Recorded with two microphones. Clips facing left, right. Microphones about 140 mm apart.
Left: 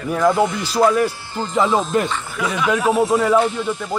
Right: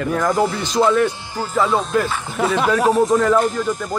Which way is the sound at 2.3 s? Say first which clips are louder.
Right 6 dB; 45° right (ahead or behind).